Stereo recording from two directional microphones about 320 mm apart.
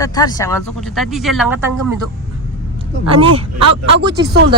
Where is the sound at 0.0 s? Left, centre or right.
Centre.